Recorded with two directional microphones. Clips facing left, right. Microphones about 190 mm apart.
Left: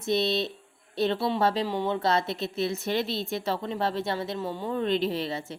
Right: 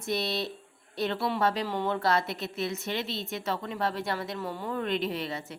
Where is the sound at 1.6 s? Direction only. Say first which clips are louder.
Left 2 dB; 15° left (ahead or behind).